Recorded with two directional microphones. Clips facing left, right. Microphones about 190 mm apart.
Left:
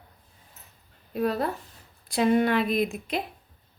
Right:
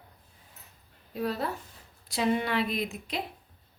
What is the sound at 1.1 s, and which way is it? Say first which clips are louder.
Speech: left 5 dB; 55° left (ahead or behind).